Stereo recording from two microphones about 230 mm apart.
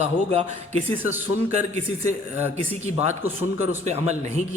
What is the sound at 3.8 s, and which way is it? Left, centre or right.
Speech, right.